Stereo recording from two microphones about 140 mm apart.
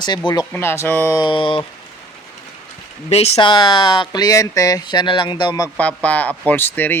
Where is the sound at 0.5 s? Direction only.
20° left (ahead or behind).